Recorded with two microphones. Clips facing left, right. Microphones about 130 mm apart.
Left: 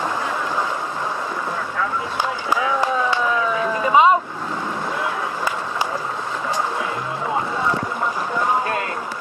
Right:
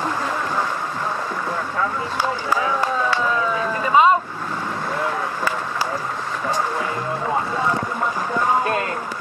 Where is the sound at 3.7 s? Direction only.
15° left (ahead or behind).